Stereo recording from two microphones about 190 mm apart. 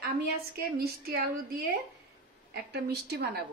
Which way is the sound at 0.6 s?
55° right (ahead or behind).